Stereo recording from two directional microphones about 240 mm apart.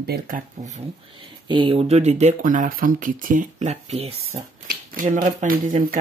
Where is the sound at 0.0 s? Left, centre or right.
Right.